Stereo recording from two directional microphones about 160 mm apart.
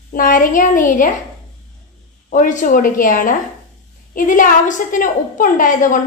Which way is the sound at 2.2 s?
55° left (ahead or behind).